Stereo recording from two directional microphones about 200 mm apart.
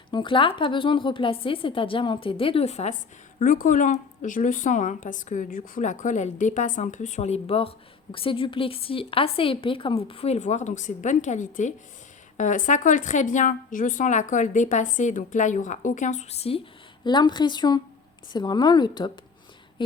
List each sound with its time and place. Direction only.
0.1 s a woman's voice: 25° left (ahead or behind)